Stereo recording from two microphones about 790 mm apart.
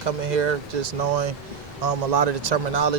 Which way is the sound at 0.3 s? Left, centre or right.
Right.